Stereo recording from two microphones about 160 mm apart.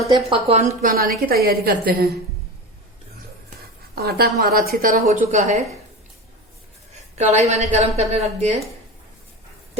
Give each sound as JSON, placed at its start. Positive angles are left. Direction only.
{"t": 0.3, "sound": "a woman's voice", "side_deg": -35}
{"t": 0.8, "sound": "a woman's voice", "side_deg": -60}
{"t": 3.9, "sound": "a woman's voice", "side_deg": -75}
{"t": 5.0, "sound": "a woman's voice", "side_deg": -45}
{"t": 6.9, "sound": "a woman's voice", "side_deg": -45}